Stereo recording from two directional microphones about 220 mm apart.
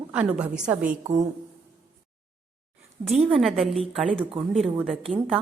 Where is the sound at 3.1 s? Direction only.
Centre (ahead or behind).